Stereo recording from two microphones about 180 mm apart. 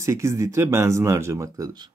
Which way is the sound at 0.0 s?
15° right (ahead or behind).